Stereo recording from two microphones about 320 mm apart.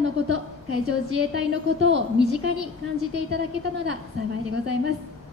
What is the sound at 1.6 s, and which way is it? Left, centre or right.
Speech, right.